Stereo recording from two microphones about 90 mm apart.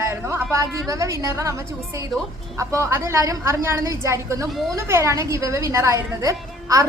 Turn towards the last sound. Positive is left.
turn(degrees=-35)  # may be behind; listen again after turning